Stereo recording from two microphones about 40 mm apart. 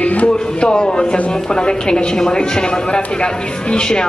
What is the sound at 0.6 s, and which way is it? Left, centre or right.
A man's voice, left.